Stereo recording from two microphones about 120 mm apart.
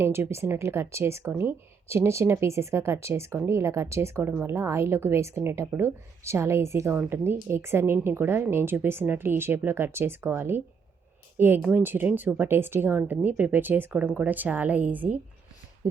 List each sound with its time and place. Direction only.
0.0 s speech: 20° right (ahead or behind)